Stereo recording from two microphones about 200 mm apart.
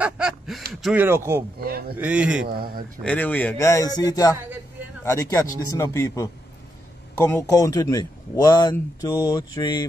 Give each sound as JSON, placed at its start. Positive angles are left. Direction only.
{"t": 0.0, "sound": "speech", "side_deg": -5}
{"t": 1.0, "sound": "speech", "side_deg": -10}
{"t": 1.6, "sound": "speech", "side_deg": -50}
{"t": 2.0, "sound": "speech", "side_deg": -10}
{"t": 2.4, "sound": "speech", "side_deg": -50}
{"t": 3.0, "sound": "a man's voice", "side_deg": 5}